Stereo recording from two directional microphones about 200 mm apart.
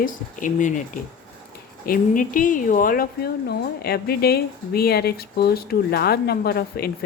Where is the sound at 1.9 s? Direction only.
40° left (ahead or behind).